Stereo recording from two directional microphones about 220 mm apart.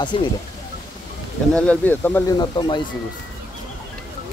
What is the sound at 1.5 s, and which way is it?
Speech, 5° left (ahead or behind).